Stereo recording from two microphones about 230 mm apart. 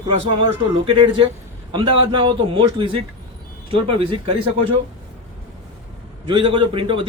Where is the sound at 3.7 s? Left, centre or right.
Right.